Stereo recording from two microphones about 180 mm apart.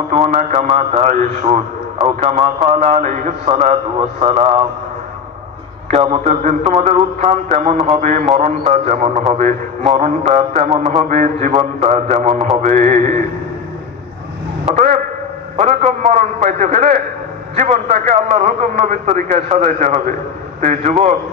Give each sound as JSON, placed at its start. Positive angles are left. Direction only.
{"t": 0.3, "sound": "mantra", "side_deg": -45}
{"t": 0.7, "sound": "a man's voice", "side_deg": -35}
{"t": 5.9, "sound": "a man's voice", "side_deg": -35}
{"t": 9.3, "sound": "mantra", "side_deg": -45}
{"t": 9.9, "sound": "a man's voice", "side_deg": -40}
{"t": 12.6, "sound": "mantra", "side_deg": -45}
{"t": 15.5, "sound": "a man's voice", "side_deg": -40}
{"t": 20.6, "sound": "mantra", "side_deg": -40}